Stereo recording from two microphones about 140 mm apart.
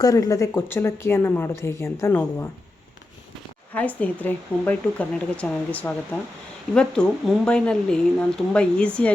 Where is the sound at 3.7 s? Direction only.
10° left (ahead or behind).